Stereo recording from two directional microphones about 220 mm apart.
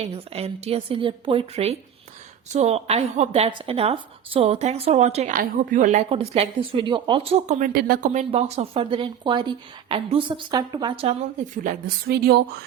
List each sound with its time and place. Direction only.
0.0 s speech: 30° right (ahead or behind)
7.7 s speech: 45° right (ahead or behind)